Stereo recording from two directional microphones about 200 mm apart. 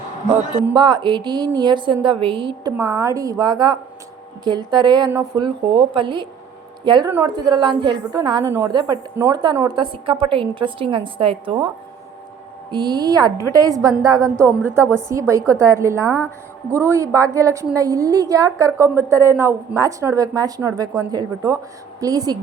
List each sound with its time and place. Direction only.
0.6 s a woman's voice: 20° right (ahead or behind)
12.7 s a woman's voice: 20° right (ahead or behind)